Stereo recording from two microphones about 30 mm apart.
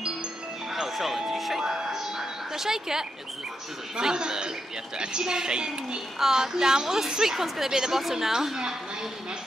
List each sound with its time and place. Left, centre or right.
0.7 s music: centre
1.6 s music: right
3.9 s speech: right
6.1 s a woman's voice: centre